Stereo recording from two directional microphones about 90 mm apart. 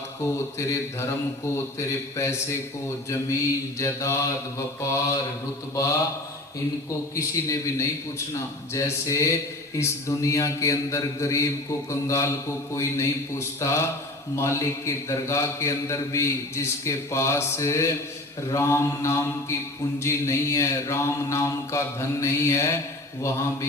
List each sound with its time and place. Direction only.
2.1 s speech: 30° left (ahead or behind)
3.8 s speech: 30° left (ahead or behind)
7.2 s speech: 35° left (ahead or behind)